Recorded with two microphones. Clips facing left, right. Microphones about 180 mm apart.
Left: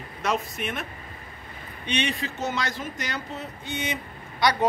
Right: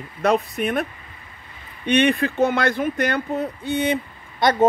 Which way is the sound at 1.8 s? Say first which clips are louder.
Right 10 dB; 55° right (ahead or behind).